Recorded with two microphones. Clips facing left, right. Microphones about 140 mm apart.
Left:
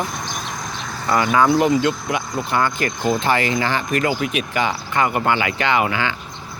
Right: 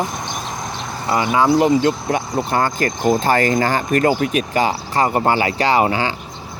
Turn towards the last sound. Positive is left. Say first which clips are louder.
# right 3 dB
turn(degrees=-35)  # may be behind; listen again after turning